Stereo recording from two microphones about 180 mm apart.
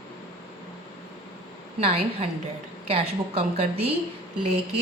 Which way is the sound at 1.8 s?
30° right (ahead or behind).